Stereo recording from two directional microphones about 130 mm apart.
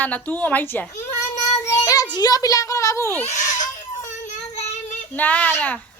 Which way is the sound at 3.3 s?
70° left (ahead or behind).